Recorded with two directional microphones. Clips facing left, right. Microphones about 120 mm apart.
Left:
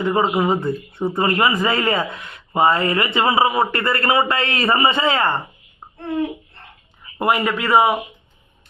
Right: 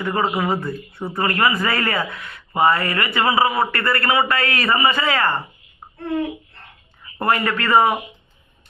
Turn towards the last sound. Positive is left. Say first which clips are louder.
# left 1 dB
turn(degrees=10)  # may be behind; listen again after turning